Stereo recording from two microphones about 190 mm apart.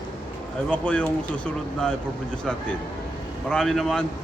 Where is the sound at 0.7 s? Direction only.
5° left (ahead or behind).